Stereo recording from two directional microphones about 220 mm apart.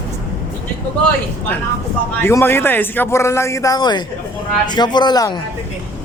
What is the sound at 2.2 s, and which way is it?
A man's voice, 10° left (ahead or behind).